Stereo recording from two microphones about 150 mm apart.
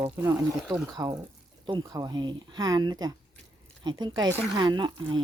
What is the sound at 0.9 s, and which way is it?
Speech, 25° right (ahead or behind).